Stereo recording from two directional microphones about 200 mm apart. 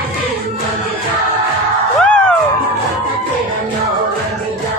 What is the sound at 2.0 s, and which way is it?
Music, 5° left (ahead or behind).